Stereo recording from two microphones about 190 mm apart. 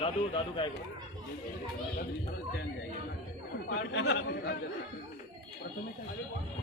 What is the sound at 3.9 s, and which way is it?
Speech, 55° left (ahead or behind).